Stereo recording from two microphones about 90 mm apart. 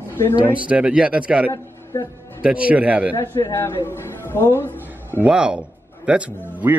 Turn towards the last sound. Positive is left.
turn(degrees=-15)  # may be behind; listen again after turning